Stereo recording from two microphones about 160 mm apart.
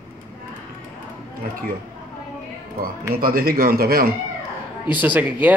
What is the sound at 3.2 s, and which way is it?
Speech, 65° right (ahead or behind).